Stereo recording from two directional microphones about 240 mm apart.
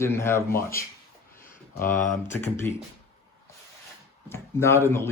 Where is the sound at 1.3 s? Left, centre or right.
Left.